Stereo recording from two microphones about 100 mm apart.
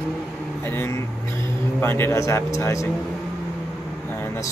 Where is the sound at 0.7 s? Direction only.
25° left (ahead or behind).